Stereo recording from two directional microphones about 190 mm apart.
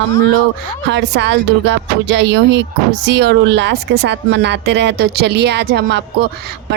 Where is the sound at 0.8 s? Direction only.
65° right (ahead or behind).